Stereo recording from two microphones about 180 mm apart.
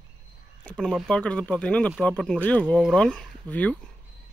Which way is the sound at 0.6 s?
5° left (ahead or behind).